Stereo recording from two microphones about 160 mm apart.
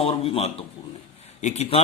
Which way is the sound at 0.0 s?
40° left (ahead or behind).